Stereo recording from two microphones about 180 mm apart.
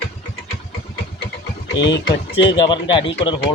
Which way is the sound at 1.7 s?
80° left.